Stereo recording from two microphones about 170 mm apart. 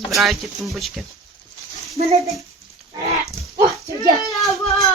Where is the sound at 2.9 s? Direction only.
35° right (ahead or behind).